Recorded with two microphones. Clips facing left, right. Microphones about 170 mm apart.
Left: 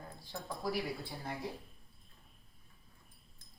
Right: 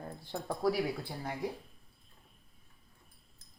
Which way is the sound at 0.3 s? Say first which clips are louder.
Right 8 dB; 60° right (ahead or behind).